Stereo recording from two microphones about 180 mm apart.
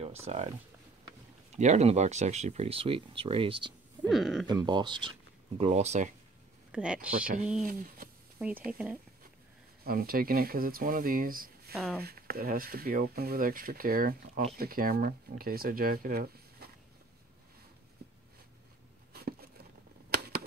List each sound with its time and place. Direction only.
0.0 s speech: 35° right (ahead or behind)
1.6 s speech: 40° right (ahead or behind)
4.1 s speech: centre (ahead or behind)
4.5 s speech: 25° right (ahead or behind)
5.6 s speech: 35° right (ahead or behind)
6.7 s speech: 5° right (ahead or behind)
7.6 s speech: 50° right (ahead or behind)
8.4 s speech: 5° right (ahead or behind)
9.8 s speech: 55° right (ahead or behind)
11.7 s speech: 5° left (ahead or behind)
12.0 s speech: 60° right (ahead or behind)
19.1 s a sound: 60° right (ahead or behind)